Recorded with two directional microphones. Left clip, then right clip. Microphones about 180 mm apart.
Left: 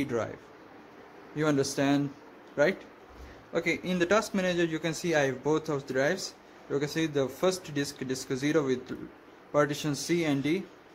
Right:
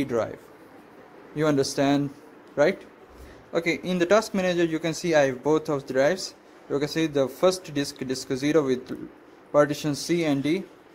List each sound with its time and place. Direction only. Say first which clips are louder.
0.0 s speech: right 5 dB; 15° right (ahead or behind)
1.3 s speech: right 4 dB; 15° right (ahead or behind)